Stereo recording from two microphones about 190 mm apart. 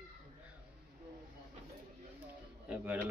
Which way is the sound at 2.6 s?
10° right (ahead or behind).